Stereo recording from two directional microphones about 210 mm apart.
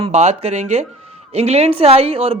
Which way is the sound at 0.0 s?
30° right (ahead or behind).